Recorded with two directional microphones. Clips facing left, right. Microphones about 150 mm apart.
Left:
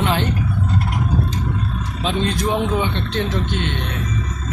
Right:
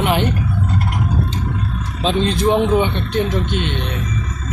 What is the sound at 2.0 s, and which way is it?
A man's voice, 25° right (ahead or behind).